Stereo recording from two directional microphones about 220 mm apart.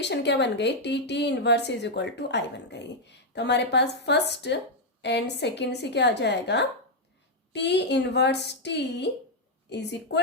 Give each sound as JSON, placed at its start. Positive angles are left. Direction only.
{"t": 0.0, "sound": "speech", "side_deg": 50}